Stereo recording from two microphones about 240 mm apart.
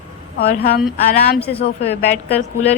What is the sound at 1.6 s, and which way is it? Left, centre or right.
A woman's voice, left.